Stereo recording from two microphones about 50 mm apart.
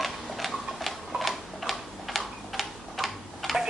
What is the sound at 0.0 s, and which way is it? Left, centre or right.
Tick-tock, centre.